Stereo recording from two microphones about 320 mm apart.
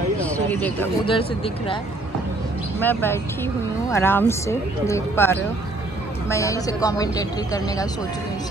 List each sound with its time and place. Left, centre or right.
0.2 s a sound: centre
1.0 s speech: centre
2.8 s speech: centre